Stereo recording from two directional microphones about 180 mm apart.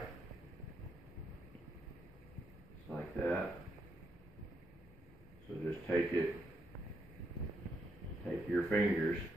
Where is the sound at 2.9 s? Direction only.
5° left (ahead or behind).